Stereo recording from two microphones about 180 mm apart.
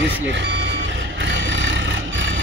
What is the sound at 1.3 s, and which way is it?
Vehicle, 90° right.